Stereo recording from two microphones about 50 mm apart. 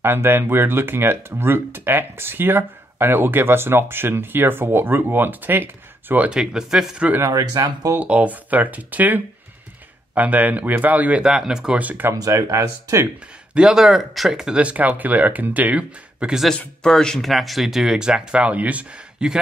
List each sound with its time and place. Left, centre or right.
0.0 s speech: right
6.3 s speech: centre
8.0 s speech: right
11.2 s speech: centre
11.7 s speech: right
12.1 s speech: right
13.6 s speech: centre
14.3 s speech: centre
14.6 s speech: right
16.2 s a man's voice: right
16.8 s speech: centre
17.3 s speech: centre; by 18.9 s right
19.2 s a man's voice: centre